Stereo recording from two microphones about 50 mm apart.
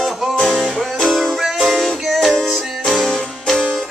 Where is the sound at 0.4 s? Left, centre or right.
Centre.